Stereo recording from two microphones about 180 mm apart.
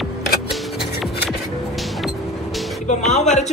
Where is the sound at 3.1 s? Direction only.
40° left (ahead or behind).